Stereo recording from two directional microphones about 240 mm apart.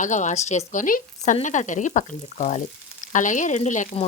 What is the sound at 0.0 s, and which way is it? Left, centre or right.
Speech, left.